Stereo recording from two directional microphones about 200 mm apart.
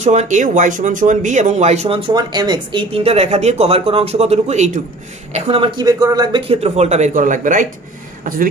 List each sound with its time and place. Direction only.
0.0 s speech: 35° right (ahead or behind)